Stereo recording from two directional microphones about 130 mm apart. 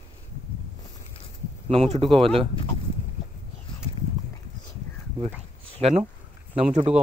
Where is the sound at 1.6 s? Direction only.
55° right (ahead or behind).